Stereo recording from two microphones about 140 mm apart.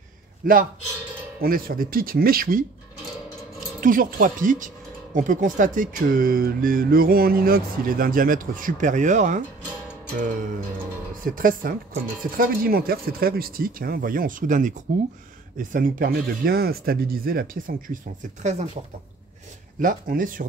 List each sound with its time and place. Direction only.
0.4 s speech: 85° right
3.8 s speech: 80° right; by 9.4 s 60° right (ahead or behind)
11.3 s speech: 80° right
18.4 s speech: 55° right (ahead or behind)
19.8 s speech: 75° right (ahead or behind)